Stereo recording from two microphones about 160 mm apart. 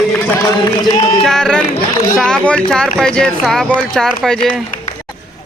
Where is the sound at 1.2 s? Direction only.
5° left (ahead or behind).